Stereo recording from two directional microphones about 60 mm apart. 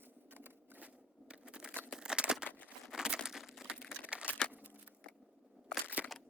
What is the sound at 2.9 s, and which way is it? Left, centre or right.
Crumpling, centre.